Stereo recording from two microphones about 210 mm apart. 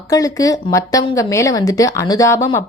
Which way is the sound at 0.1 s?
15° left (ahead or behind).